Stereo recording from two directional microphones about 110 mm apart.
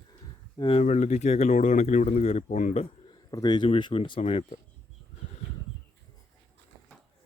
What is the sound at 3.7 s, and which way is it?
Speech, 50° left (ahead or behind).